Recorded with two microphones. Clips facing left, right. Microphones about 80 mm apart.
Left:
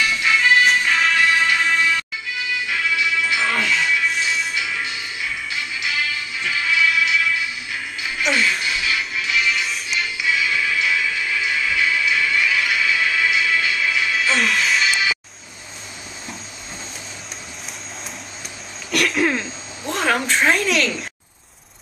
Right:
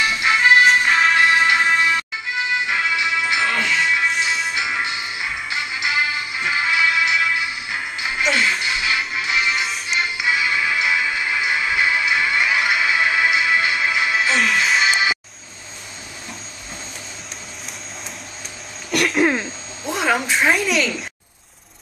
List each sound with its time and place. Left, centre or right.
0.0 s music: right
3.9 s music: right
4.6 s music: right
9.3 s music: right
14.3 s music: centre
14.6 s music: right
18.9 s throat clearing: centre
19.2 s a sound: centre